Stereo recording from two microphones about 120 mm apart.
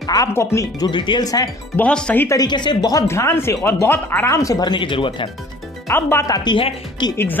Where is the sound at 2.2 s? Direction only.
35° left (ahead or behind).